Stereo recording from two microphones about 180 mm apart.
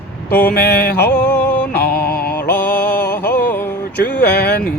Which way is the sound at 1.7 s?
60° left (ahead or behind).